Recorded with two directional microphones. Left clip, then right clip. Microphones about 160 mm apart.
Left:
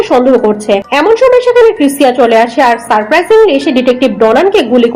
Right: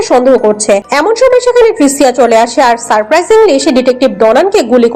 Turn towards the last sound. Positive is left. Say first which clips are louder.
# even
turn(degrees=-40)  # may be behind; listen again after turning